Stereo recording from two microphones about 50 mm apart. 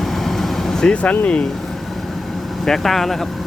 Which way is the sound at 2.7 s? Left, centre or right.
Centre.